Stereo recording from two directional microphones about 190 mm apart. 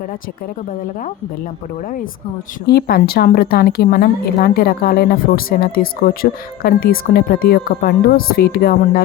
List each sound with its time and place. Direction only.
2.6 s a woman's voice: 55° left (ahead or behind)